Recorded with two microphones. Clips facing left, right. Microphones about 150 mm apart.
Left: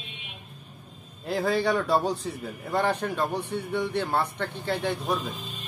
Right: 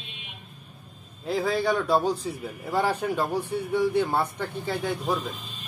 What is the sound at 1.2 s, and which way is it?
A man's voice, centre (ahead or behind).